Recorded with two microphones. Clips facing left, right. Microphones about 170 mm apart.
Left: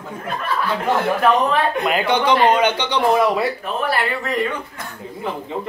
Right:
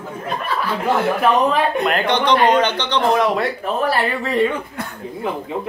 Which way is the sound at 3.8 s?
40° right (ahead or behind).